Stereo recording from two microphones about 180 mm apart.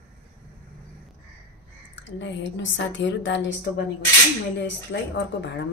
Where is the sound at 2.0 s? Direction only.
85° left.